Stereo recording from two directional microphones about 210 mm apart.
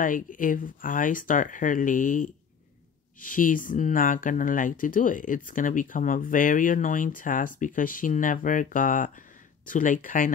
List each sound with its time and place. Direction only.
0.0 s speech: 40° left (ahead or behind)